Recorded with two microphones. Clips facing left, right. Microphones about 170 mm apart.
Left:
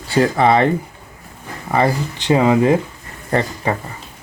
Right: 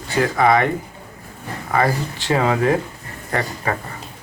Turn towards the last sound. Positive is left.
turn(degrees=25)  # may be behind; listen again after turning